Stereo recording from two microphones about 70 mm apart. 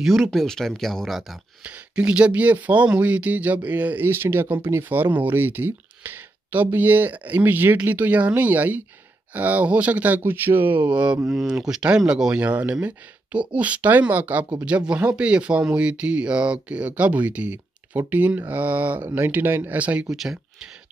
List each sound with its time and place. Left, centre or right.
0.0 s speech: centre
1.6 s speech: centre
20.2 s speech: centre